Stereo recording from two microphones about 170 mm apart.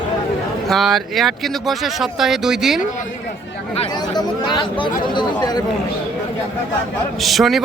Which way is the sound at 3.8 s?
25° left (ahead or behind).